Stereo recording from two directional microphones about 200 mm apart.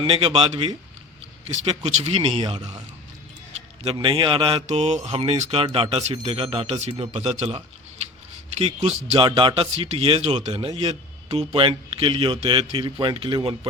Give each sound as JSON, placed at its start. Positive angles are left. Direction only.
{"t": 0.0, "sound": "speech", "side_deg": -25}
{"t": 3.9, "sound": "speech", "side_deg": -25}